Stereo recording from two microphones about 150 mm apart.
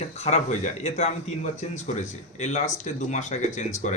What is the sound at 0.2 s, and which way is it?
Speech, 50° left (ahead or behind).